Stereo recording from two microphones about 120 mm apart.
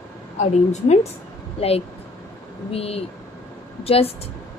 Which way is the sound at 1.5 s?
55° left (ahead or behind).